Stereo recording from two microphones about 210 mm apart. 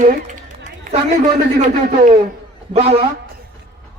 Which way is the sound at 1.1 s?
35° right (ahead or behind).